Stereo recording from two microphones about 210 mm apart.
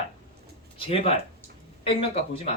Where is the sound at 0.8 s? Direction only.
25° left (ahead or behind).